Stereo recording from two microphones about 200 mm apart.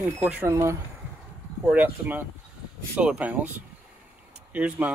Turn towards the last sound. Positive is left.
turn(degrees=-5)  # may be behind; listen again after turning